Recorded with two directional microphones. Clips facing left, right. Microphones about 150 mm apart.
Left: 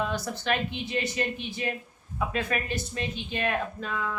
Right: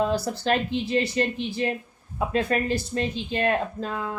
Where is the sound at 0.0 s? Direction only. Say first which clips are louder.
Right 6 dB; 35° right (ahead or behind).